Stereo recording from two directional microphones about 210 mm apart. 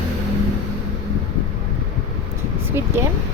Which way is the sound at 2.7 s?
10° right (ahead or behind).